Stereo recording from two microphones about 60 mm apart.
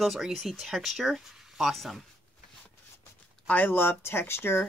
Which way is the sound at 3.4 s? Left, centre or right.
Left.